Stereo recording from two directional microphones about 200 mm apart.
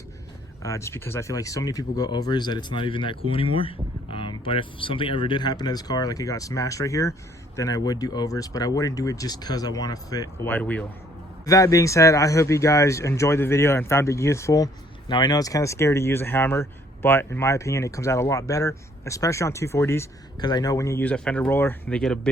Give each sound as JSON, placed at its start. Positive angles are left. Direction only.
{"t": 0.6, "sound": "speech", "side_deg": 15}